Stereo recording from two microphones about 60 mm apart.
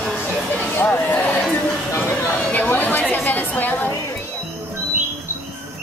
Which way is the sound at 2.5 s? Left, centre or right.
Left.